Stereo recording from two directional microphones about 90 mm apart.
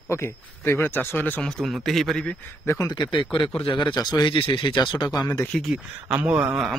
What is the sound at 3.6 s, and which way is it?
Speech, 65° left (ahead or behind).